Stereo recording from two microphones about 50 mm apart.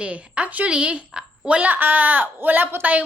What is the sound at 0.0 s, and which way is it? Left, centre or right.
A woman's voice, right.